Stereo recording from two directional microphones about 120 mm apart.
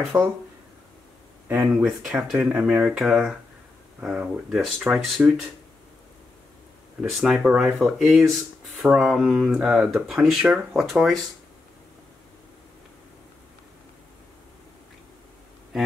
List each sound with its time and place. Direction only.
0.1 s speech: 20° right (ahead or behind)
1.5 s speech: 15° right (ahead or behind)
1.9 s speech: 5° right (ahead or behind)
7.2 s speech: 5° right (ahead or behind)